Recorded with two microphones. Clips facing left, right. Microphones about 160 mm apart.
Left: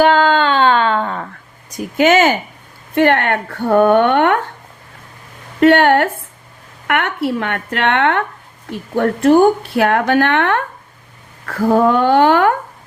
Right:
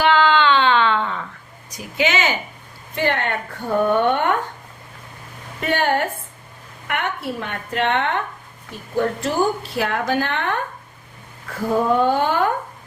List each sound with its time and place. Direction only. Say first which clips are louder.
0.0 s a sound: left 4 dB; 45° left (ahead or behind)
1.7 s speech: left 9 dB; 50° left (ahead or behind)
2.9 s a woman's voice: left 8 dB; 60° left (ahead or behind)
5.5 s a woman's voice: left 10 dB; 70° left (ahead or behind)